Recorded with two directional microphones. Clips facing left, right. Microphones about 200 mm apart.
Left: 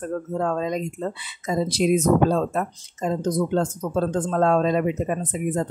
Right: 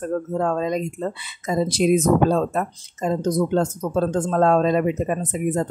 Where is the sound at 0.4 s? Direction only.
45° right (ahead or behind).